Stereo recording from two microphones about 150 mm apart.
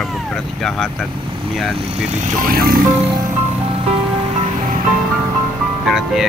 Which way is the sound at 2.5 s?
75° right (ahead or behind).